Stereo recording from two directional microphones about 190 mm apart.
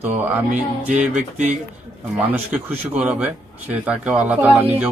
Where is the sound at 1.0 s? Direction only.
40° right (ahead or behind).